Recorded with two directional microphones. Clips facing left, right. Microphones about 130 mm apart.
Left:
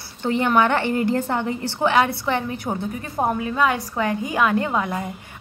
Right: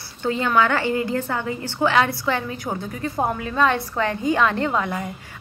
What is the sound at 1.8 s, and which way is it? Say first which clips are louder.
Speech: even; 20° left (ahead or behind).